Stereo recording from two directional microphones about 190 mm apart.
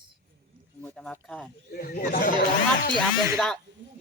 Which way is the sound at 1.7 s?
50° left (ahead or behind).